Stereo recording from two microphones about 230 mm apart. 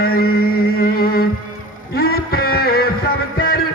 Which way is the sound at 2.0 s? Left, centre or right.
Left.